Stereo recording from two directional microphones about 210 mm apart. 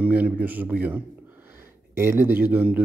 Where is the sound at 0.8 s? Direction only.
10° right (ahead or behind).